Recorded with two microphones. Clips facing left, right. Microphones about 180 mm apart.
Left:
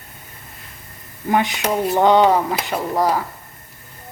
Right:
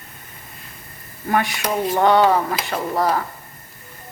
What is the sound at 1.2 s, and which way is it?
Speech, 20° left (ahead or behind).